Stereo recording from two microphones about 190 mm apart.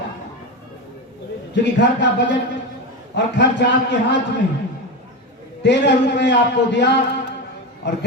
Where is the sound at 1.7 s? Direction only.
65° left (ahead or behind).